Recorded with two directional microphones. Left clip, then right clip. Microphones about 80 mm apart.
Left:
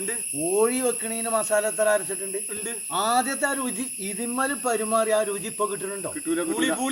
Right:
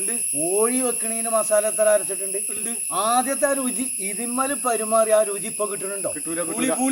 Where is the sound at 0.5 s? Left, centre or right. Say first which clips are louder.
Even; centre.